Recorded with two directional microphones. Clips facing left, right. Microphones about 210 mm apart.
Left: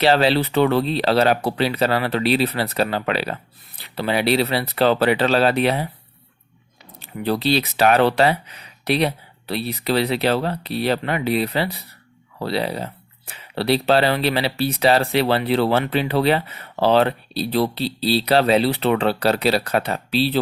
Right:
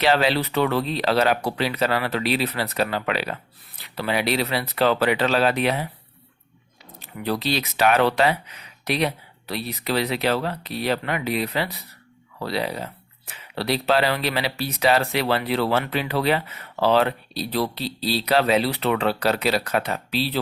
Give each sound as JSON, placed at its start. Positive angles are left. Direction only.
{"t": 0.0, "sound": "speech", "side_deg": 30}
{"t": 7.0, "sound": "speech", "side_deg": 30}